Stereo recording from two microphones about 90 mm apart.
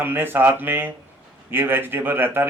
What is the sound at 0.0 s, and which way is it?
Speech, 25° right (ahead or behind).